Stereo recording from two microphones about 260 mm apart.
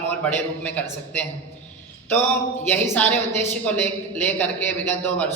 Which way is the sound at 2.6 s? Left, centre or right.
Centre.